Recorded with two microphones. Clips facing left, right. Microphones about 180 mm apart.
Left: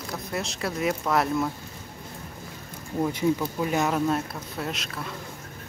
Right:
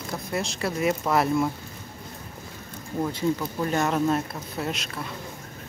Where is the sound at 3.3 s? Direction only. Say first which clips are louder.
Even; 5° left (ahead or behind).